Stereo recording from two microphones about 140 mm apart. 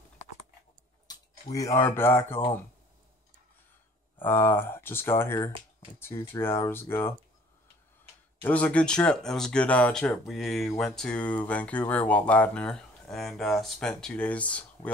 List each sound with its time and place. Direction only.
1.0 s speech: 25° left (ahead or behind)
4.2 s speech: 15° left (ahead or behind)
8.4 s speech: 10° left (ahead or behind)